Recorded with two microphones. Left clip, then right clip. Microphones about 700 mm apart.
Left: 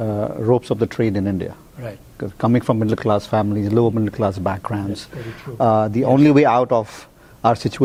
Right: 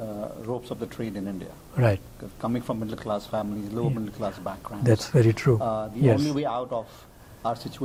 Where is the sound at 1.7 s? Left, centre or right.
Right.